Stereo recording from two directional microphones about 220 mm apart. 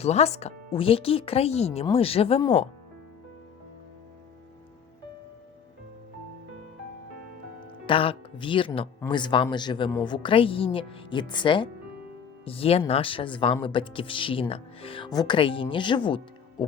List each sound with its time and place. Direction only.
0.0 s speech: 30° left (ahead or behind)
7.9 s speech: 25° left (ahead or behind)